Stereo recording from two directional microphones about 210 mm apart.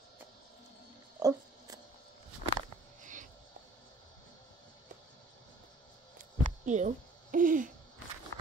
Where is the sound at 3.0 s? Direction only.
35° right (ahead or behind).